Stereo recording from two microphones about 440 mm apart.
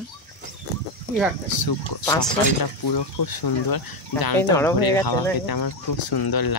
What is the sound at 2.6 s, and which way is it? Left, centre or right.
Speech, left.